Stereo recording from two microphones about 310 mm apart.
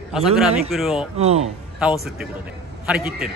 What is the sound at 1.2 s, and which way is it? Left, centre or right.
Speech, centre.